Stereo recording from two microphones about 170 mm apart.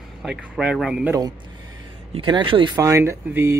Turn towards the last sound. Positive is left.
turn(degrees=-15)  # may be behind; listen again after turning